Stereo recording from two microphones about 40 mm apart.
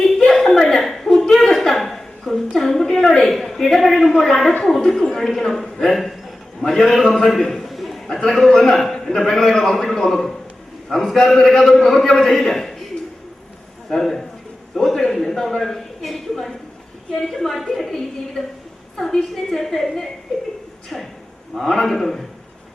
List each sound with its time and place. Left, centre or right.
0.2 s a sound: centre
2.6 s a man's voice: centre
7.4 s a sound: centre
8.4 s a man's voice: centre
13.9 s a man's voice: centre
20.9 s a man's voice: centre